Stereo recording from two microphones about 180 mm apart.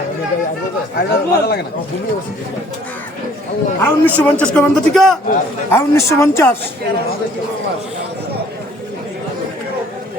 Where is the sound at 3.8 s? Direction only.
10° left (ahead or behind).